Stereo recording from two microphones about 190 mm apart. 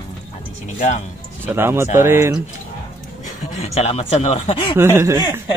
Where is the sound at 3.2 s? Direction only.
35° left (ahead or behind).